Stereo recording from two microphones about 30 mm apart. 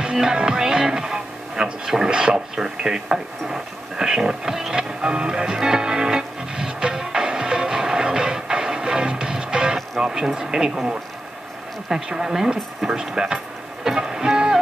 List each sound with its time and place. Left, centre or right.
0.0 s speech: right
2.6 s a sound: right
9.9 s speech: centre
11.9 s speech: centre
13.8 s music: centre